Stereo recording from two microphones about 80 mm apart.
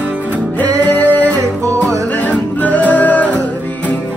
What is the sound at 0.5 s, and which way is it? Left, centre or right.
Music, centre.